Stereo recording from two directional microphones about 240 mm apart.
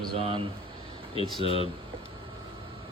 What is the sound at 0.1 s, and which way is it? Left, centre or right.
Speech, right.